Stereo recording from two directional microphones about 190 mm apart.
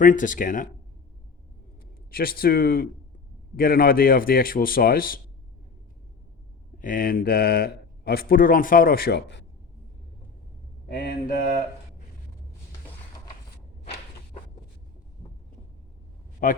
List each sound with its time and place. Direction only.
0.0 s speech: 45° left (ahead or behind)
2.0 s speech: 50° left (ahead or behind)
6.8 s speech: 50° left (ahead or behind); by 9.5 s 65° left (ahead or behind)
10.8 s speech: 55° left (ahead or behind)
16.4 s speech: 45° left (ahead or behind)